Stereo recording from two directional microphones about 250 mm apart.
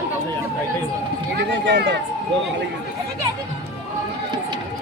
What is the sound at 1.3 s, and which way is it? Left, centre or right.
Speech, right.